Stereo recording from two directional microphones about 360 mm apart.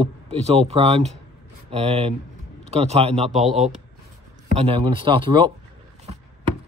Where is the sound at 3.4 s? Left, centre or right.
Centre.